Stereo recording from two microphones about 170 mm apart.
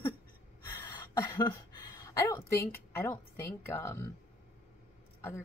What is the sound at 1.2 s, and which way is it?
A woman's voice, 20° left (ahead or behind).